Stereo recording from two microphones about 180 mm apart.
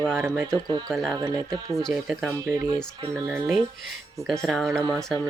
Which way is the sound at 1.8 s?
Centre (ahead or behind).